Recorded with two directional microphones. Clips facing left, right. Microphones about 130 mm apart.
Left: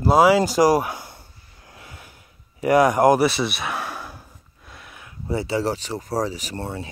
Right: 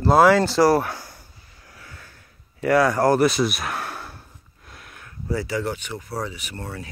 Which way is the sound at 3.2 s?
Centre (ahead or behind).